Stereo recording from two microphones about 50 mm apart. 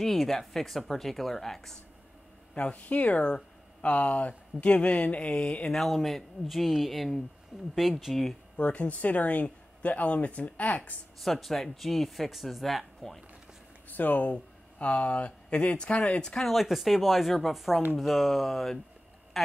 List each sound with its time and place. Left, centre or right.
0.0 s speech: centre
2.5 s speech: left
5.7 s speech: centre
8.5 s speech: left
11.1 s speech: centre
13.8 s speech: left
16.3 s a woman's voice: centre